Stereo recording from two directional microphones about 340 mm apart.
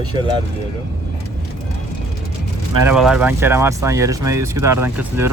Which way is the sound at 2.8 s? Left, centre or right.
Centre.